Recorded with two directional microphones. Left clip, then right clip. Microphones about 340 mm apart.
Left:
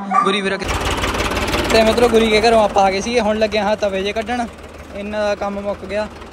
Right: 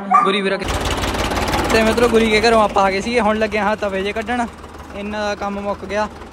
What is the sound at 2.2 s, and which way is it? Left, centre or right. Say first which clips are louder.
Speech: left 1 dB; right.